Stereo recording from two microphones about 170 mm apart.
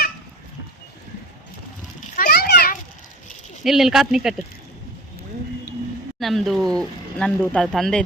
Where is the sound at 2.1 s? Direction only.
60° left (ahead or behind).